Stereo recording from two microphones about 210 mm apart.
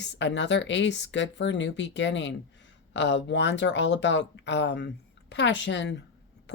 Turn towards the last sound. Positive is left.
turn(degrees=55)  # may be behind; listen again after turning